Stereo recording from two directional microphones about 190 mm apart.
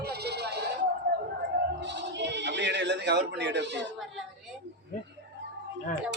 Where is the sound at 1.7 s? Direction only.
65° right (ahead or behind).